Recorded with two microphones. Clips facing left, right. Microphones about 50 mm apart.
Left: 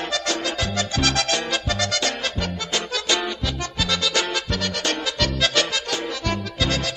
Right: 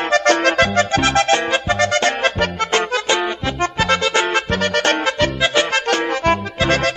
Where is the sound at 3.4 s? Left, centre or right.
Right.